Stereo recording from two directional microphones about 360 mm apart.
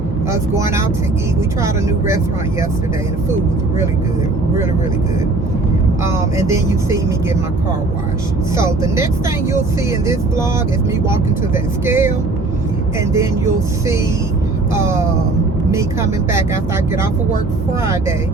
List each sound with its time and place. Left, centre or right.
0.3 s speech: centre
6.1 s speech: centre
8.5 s speech: centre
11.1 s speech: centre
13.1 s speech: centre